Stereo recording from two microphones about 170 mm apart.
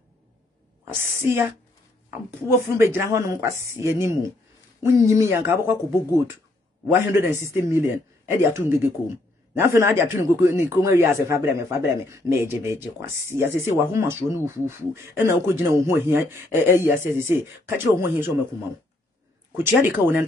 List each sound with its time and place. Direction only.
1.2 s speech: 15° right (ahead or behind)
2.8 s speech: 15° right (ahead or behind)
19.5 s speech: 15° right (ahead or behind)